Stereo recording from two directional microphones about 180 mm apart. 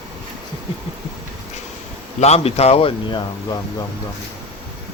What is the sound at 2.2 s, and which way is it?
Speech, 35° left (ahead or behind).